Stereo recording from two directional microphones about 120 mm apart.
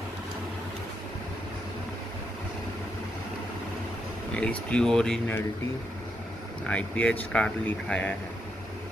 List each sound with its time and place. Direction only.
4.3 s speech: 10° left (ahead or behind)
6.6 s speech: 10° left (ahead or behind)